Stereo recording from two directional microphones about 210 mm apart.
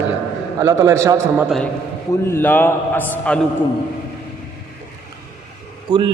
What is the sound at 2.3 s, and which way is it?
A man's voice, 10° left (ahead or behind).